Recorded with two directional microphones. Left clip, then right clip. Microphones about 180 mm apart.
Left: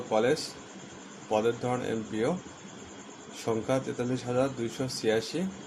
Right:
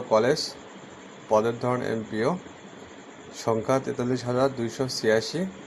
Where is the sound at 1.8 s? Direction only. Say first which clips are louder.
Right 4 dB; 15° right (ahead or behind).